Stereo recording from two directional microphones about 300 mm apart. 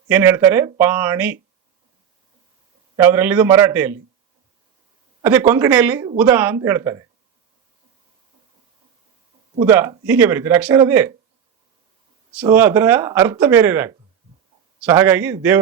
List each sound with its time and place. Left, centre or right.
0.1 s speech: centre
2.9 s speech: centre
5.2 s speech: centre
9.6 s speech: centre
12.4 s speech: centre